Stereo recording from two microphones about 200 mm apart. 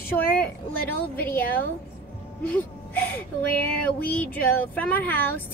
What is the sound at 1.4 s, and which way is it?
Speech, 45° left (ahead or behind).